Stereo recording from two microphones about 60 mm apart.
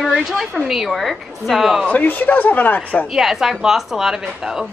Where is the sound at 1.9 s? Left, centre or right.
Left.